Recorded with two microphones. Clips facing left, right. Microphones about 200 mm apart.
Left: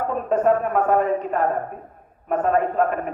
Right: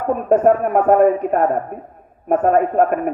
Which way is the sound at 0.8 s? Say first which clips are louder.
Right 7 dB; 45° right (ahead or behind).